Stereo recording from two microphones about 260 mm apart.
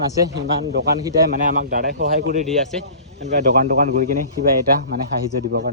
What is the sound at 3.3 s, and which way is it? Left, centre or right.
Speech, right.